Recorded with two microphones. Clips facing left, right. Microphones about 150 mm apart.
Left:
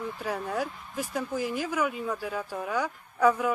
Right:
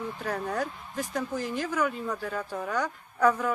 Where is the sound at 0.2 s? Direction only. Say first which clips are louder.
Even; 5° left (ahead or behind).